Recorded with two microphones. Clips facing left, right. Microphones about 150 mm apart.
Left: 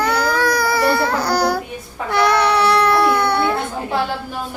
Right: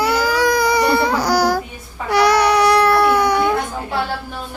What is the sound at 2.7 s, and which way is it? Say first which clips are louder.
Baby cry: right 1 dB; 5° right (ahead or behind).